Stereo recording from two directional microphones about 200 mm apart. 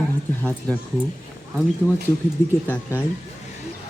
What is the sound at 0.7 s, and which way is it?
Speech, 5° left (ahead or behind).